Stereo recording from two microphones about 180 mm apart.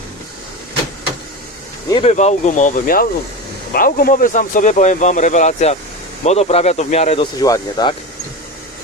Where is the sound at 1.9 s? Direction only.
35° left (ahead or behind).